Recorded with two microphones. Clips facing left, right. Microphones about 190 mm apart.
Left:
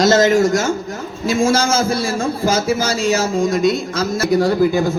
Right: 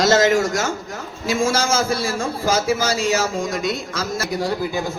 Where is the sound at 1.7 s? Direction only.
25° left (ahead or behind).